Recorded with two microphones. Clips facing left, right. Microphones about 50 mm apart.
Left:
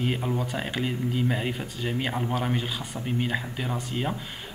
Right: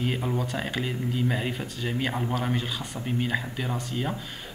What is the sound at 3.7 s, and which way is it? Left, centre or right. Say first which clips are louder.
Speech: left 2 dB; centre.